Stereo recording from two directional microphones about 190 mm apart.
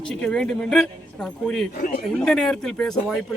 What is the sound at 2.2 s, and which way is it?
Speech, centre (ahead or behind).